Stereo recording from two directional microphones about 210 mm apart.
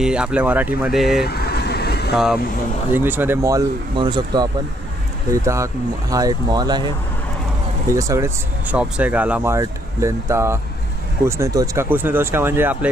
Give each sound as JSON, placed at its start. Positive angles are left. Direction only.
{"t": 0.0, "sound": "speech", "side_deg": -5}
{"t": 1.2, "sound": "vehicle", "side_deg": 50}
{"t": 2.1, "sound": "speech", "side_deg": 0}
{"t": 7.9, "sound": "speech", "side_deg": -15}